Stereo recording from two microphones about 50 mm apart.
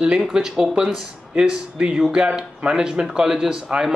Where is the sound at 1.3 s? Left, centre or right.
Centre.